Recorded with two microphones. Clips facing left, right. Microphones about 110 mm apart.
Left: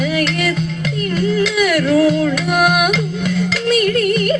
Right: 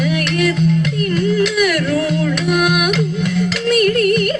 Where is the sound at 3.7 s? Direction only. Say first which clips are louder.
Right 2 dB; 55° right (ahead or behind).